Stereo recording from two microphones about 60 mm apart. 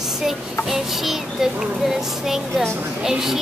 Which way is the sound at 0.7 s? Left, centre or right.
Centre.